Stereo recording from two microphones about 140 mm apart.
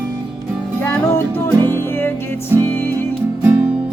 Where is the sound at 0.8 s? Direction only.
20° left (ahead or behind).